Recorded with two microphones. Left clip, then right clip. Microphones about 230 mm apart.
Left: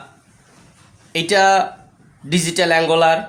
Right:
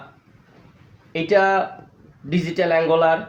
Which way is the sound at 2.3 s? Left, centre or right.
Left.